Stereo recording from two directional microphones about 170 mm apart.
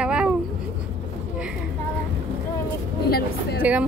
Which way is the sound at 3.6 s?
10° right (ahead or behind).